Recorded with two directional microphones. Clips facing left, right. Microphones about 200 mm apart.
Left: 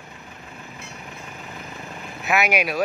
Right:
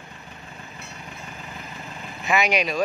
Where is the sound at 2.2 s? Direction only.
5° left (ahead or behind).